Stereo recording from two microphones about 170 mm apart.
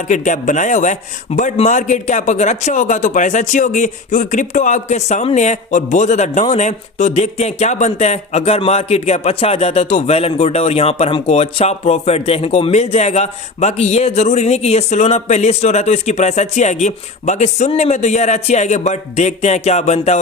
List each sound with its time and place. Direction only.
0.1 s a man's voice: 45° left (ahead or behind)